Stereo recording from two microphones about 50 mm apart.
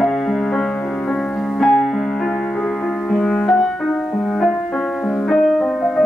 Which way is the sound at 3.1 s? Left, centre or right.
Centre.